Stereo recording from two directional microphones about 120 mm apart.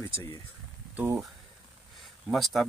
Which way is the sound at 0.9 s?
15° right (ahead or behind).